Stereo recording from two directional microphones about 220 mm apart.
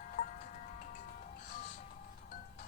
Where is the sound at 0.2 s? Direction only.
45° left (ahead or behind).